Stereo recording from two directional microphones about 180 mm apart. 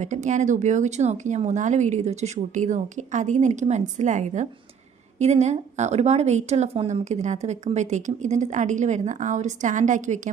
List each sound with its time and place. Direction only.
0.0 s speech: 40° right (ahead or behind)